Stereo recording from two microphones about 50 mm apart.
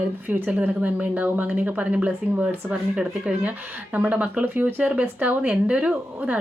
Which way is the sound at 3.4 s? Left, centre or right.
Right.